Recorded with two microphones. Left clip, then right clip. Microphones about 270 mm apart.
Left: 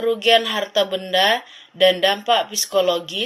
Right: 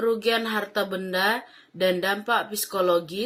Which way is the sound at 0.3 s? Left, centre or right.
Left.